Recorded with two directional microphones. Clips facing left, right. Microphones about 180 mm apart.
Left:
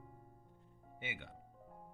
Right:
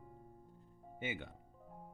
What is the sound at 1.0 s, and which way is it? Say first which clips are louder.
Speech: right 6 dB; 45° right (ahead or behind).